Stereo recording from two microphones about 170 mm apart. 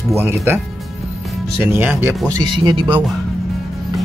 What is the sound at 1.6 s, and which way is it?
Speech, 15° right (ahead or behind).